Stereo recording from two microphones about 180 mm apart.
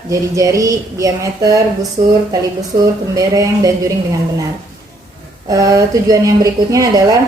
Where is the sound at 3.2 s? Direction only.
20° right (ahead or behind).